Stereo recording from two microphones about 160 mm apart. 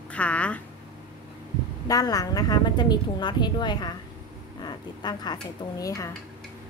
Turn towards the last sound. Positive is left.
turn(degrees=20)  # may be behind; listen again after turning